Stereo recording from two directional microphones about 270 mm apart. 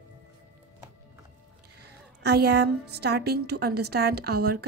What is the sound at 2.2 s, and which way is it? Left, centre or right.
A woman's voice, right.